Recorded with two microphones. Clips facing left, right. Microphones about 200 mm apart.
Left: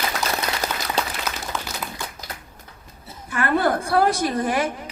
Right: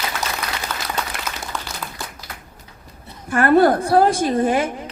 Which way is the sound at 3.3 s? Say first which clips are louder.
Right 7 dB; 45° right (ahead or behind).